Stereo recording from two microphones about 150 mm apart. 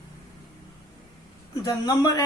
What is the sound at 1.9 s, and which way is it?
Speech, 25° left (ahead or behind).